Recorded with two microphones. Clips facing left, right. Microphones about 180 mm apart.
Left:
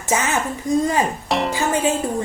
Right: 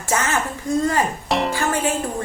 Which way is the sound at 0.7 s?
15° left (ahead or behind).